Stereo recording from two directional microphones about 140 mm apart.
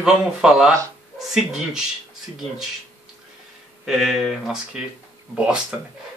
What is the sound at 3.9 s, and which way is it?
Speech, centre (ahead or behind).